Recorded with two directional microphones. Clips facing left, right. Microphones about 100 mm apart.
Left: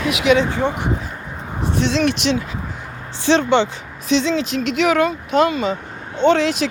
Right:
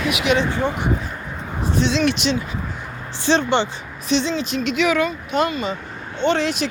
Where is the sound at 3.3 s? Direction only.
90° left.